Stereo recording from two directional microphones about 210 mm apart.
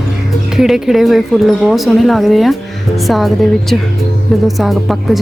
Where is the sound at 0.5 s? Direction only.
Centre (ahead or behind).